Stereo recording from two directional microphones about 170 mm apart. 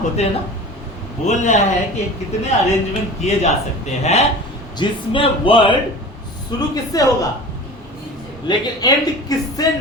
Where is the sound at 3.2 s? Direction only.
40° left (ahead or behind); by 7.1 s 20° left (ahead or behind).